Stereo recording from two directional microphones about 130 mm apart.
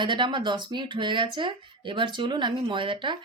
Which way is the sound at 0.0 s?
40° right (ahead or behind).